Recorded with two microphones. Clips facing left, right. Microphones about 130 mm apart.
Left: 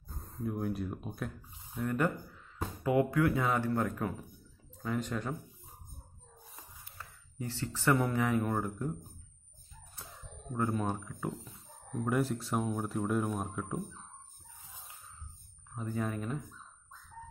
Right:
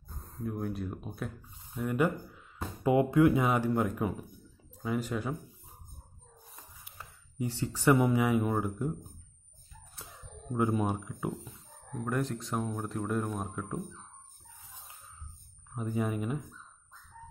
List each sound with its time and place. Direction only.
0.2 s speech: centre (ahead or behind)
2.8 s speech: 20° right (ahead or behind); by 5.3 s 5° right (ahead or behind)
7.0 s speech: 15° right (ahead or behind)
10.5 s speech: 10° right (ahead or behind)
12.0 s speech: 5° left (ahead or behind)
15.7 s speech: 10° right (ahead or behind)